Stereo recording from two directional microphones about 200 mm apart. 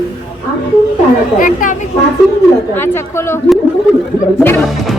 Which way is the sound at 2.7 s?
10° left (ahead or behind).